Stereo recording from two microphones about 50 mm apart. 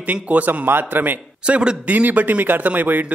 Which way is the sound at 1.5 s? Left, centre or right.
Centre.